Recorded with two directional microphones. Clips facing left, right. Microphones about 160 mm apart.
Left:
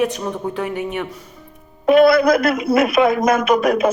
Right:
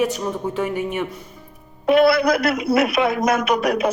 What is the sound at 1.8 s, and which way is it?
A man's voice, 45° left (ahead or behind).